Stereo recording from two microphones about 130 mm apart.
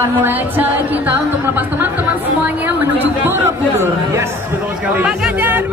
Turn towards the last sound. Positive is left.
turn(degrees=-15)  # may be behind; listen again after turning